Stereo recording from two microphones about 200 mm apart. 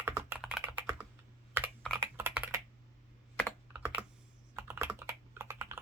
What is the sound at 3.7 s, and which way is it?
Computer keyboard, 5° right (ahead or behind).